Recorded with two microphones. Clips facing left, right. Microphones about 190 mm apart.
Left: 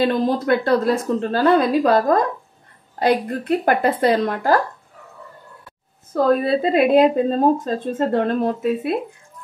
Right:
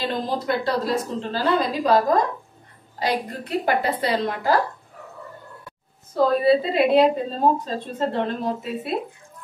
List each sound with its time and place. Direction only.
0.5 s a woman's voice: 55° left (ahead or behind)
3.0 s a woman's voice: 50° left (ahead or behind)
6.1 s a woman's voice: 50° left (ahead or behind)